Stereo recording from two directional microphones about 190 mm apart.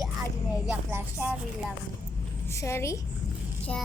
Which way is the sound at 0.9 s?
10° right (ahead or behind).